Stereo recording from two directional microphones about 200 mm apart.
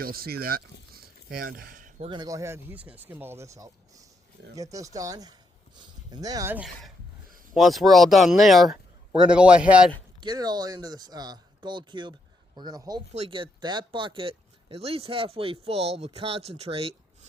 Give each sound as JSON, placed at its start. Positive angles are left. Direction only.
{"t": 0.0, "sound": "speech", "side_deg": -50}
{"t": 2.0, "sound": "speech", "side_deg": -20}
{"t": 10.2, "sound": "speech", "side_deg": -20}